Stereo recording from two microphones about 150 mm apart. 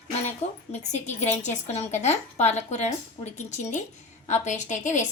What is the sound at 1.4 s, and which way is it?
A woman's voice, 45° left (ahead or behind).